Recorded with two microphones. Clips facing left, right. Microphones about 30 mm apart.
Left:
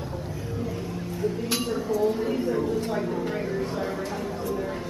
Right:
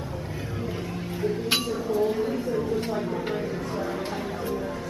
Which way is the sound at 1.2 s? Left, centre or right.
Right.